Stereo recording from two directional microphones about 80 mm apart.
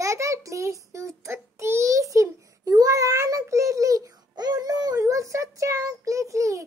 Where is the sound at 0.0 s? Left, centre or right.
Right.